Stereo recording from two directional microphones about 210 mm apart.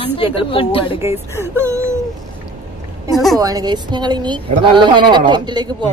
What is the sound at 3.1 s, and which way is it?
Speech, centre (ahead or behind).